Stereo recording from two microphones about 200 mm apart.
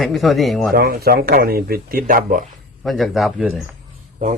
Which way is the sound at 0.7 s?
45° right (ahead or behind).